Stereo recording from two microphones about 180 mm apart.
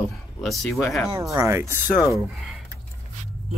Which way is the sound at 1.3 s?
15° right (ahead or behind).